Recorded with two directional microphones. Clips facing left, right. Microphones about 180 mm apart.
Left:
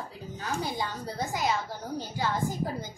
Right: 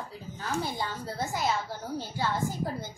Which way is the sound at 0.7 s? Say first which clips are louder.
Left 1 dB; 15° left (ahead or behind).